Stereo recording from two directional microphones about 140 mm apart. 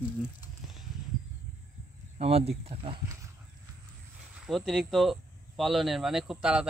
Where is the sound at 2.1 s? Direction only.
45° right (ahead or behind).